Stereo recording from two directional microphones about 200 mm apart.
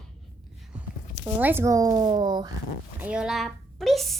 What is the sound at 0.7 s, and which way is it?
Speech, 10° right (ahead or behind).